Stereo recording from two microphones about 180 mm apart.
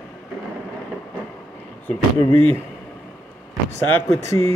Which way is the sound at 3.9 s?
15° left (ahead or behind).